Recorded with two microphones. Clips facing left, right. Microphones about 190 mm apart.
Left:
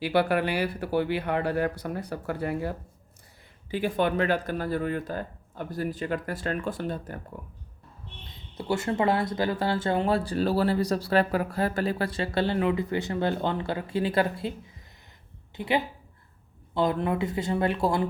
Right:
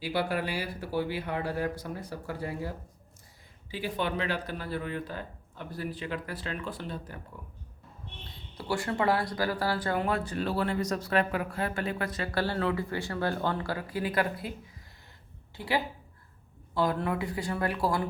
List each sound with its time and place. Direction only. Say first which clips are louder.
0.0 s speech: left 6 dB; 65° left (ahead or behind)
3.7 s speech: left 6 dB; 55° left (ahead or behind)
8.5 s speech: left 4 dB; 25° left (ahead or behind)
15.5 s a woman's voice: left 4 dB; 20° left (ahead or behind)